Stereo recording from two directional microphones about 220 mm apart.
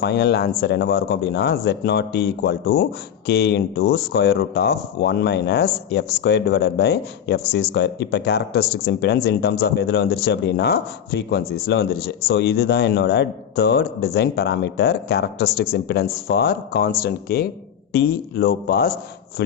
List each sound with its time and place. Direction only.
0.0 s speech: 50° left (ahead or behind)